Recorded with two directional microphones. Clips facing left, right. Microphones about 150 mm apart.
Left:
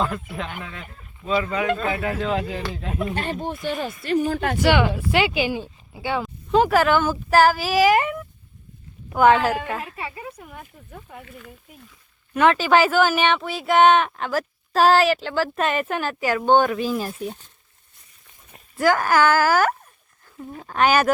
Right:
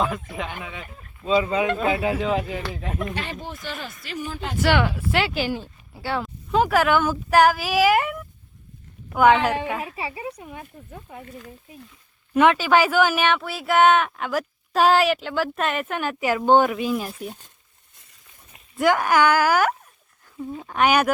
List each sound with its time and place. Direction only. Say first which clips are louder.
0.0 s speech: even; 5° right (ahead or behind)
1.2 s speech: right 2 dB; 20° right (ahead or behind)
2.1 s speech: right 1 dB; 5° right (ahead or behind)
3.5 s speech: left 7 dB; 25° left (ahead or behind)
3.8 s speech: left 10 dB; 55° left (ahead or behind)
4.7 s speech: even; 10° left (ahead or behind)
6.0 s speech: left 2 dB; centre (ahead or behind)
11.3 s speech: right 2 dB; 35° right (ahead or behind)
12.5 s speech: left 3 dB; 5° right (ahead or behind)
18.8 s speech: even; 20° right (ahead or behind)
20.6 s speech: left 1 dB; centre (ahead or behind)